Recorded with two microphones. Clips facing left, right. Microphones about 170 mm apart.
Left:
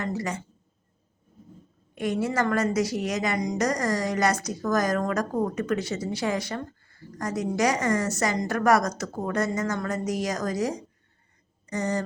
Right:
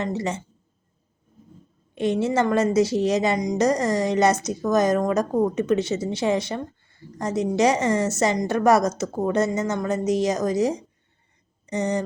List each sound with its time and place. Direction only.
0.0 s a woman's voice: 25° right (ahead or behind)
2.0 s a woman's voice: 25° right (ahead or behind)